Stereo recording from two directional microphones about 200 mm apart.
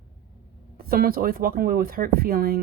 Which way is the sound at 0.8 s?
45° right (ahead or behind).